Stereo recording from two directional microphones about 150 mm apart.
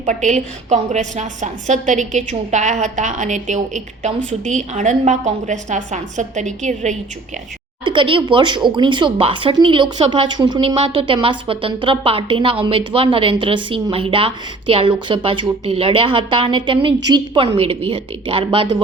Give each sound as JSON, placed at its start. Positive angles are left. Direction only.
{"t": 0.0, "sound": "a woman's voice", "side_deg": -55}
{"t": 7.9, "sound": "speech", "side_deg": -35}